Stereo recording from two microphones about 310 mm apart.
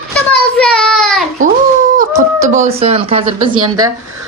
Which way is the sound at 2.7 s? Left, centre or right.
Centre.